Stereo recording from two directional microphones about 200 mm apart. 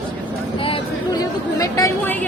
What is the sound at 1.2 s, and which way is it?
Speech, 15° left (ahead or behind).